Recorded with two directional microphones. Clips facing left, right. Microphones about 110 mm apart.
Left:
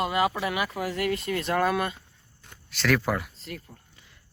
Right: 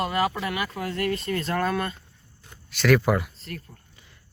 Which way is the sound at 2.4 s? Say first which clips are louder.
Right 5 dB; 5° right (ahead or behind).